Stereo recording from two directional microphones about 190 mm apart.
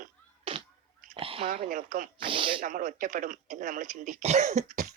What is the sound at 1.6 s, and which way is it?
Speech, 45° right (ahead or behind).